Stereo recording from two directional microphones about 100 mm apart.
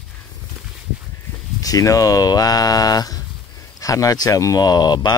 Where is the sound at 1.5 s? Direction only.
35° left (ahead or behind).